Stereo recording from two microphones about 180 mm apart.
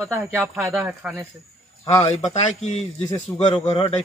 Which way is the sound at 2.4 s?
40° left (ahead or behind).